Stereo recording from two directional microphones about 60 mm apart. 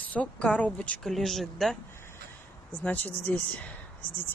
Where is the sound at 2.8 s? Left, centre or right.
Left.